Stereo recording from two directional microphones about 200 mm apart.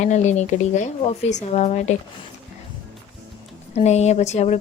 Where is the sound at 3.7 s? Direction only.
35° left (ahead or behind).